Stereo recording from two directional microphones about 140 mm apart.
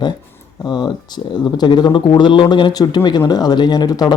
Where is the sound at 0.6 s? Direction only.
30° left (ahead or behind).